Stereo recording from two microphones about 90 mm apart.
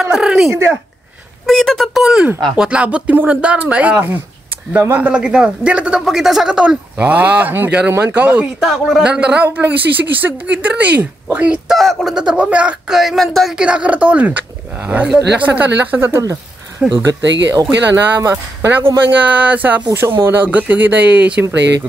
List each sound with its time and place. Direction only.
0.0 s speech: 10° right (ahead or behind)
0.5 s speech: 30° right (ahead or behind)
1.4 s speech: 5° left (ahead or behind)
2.5 s a man's voice: 10° right (ahead or behind)
8.5 s a man's voice: centre (ahead or behind)
11.7 s speech: centre (ahead or behind)
13.7 s a man's voice: 15° right (ahead or behind); by 16.3 s 30° right (ahead or behind)
16.8 s a man's voice: 10° right (ahead or behind)
18.0 s speech: 25° right (ahead or behind)